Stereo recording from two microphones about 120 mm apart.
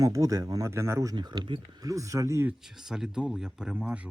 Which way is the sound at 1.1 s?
35° right (ahead or behind).